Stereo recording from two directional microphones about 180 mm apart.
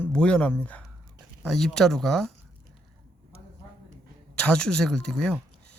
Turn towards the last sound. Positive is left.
turn(degrees=5)  # may be behind; listen again after turning